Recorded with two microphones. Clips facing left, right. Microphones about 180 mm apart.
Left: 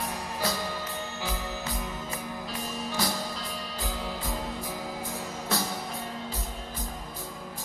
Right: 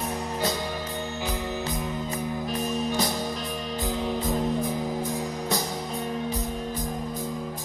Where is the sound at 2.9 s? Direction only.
20° right (ahead or behind).